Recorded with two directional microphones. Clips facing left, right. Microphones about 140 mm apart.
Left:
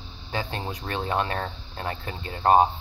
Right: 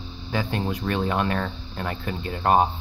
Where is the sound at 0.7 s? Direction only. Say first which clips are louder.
Right 2 dB; 25° left (ahead or behind).